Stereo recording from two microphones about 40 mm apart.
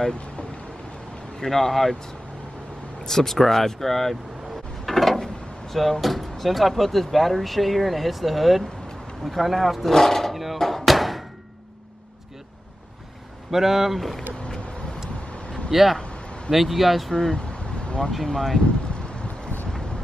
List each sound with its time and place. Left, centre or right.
1.4 s speech: centre
3.1 s speech: centre
10.3 s a sound: centre
13.5 s speech: centre
15.7 s speech: centre
16.0 s a sound: left
16.4 s speech: centre
17.1 s speech: centre
17.4 s vehicle: left
18.2 s speech: centre